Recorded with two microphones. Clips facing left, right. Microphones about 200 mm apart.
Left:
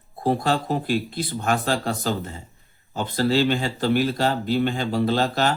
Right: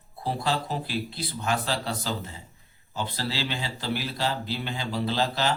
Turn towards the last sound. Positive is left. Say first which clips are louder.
# left 5 dB
turn(degrees=50)  # may be behind; listen again after turning